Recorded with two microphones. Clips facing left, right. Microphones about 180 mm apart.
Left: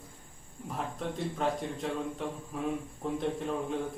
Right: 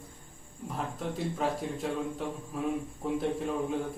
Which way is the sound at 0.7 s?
Centre (ahead or behind).